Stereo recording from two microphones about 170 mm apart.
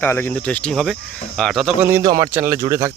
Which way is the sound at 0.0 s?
10° left (ahead or behind).